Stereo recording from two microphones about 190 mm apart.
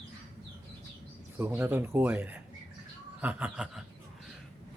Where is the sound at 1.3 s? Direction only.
10° right (ahead or behind).